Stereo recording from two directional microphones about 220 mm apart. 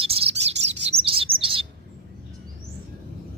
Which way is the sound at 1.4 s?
25° right (ahead or behind).